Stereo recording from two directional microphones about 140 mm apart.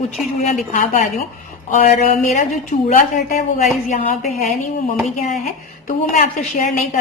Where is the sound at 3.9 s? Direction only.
60° left (ahead or behind).